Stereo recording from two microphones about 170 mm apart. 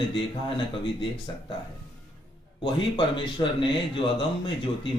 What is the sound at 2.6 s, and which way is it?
Speech, 30° left (ahead or behind).